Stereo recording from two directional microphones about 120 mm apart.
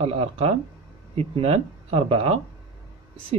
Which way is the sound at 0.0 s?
55° right (ahead or behind).